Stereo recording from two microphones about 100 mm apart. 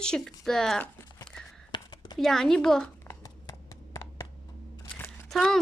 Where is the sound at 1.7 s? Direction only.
45° left (ahead or behind).